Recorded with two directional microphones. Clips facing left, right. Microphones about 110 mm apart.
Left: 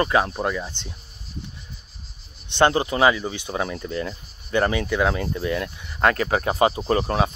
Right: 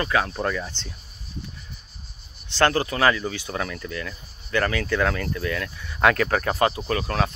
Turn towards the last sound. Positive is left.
turn(degrees=20)  # may be behind; listen again after turning